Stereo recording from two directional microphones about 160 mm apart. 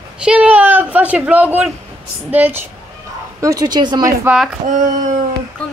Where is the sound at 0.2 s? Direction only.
5° right (ahead or behind).